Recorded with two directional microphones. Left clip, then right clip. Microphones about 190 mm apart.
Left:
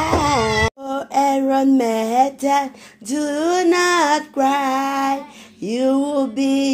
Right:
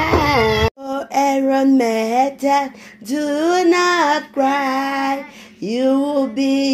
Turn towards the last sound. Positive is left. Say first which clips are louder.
# right 1 dB
turn(degrees=0)  # may be behind; listen again after turning